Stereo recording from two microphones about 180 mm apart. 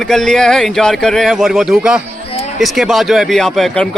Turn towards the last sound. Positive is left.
turn(degrees=0)  # may be behind; listen again after turning